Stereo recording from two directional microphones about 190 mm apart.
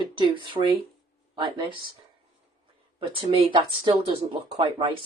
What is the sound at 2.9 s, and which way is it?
Speech, 25° right (ahead or behind).